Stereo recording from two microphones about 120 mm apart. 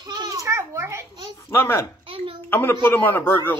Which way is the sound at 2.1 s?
50° right (ahead or behind).